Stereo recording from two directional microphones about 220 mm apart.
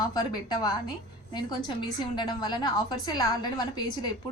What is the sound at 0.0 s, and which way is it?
A woman's voice, 20° left (ahead or behind).